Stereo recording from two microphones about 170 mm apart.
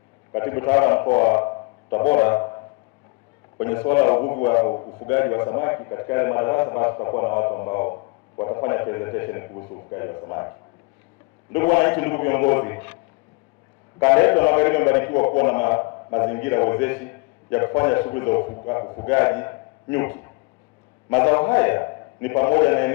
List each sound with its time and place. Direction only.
0.3 s a man's voice: 15° left (ahead or behind)
3.6 s a man's voice: 15° left (ahead or behind)
4.7 s a man's voice: 30° left (ahead or behind)
5.0 s a man's voice: 15° left (ahead or behind)
9.5 s a man's voice: 35° left (ahead or behind)
9.9 s a man's voice: 20° left (ahead or behind)
11.5 s a man's voice: 15° left (ahead or behind)
14.0 s a man's voice: 10° left (ahead or behind)